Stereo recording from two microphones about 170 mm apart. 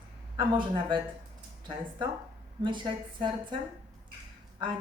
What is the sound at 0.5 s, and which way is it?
Speech, 30° right (ahead or behind).